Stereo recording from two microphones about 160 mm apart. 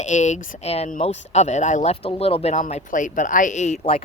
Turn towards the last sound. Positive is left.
turn(degrees=35)  # may be behind; listen again after turning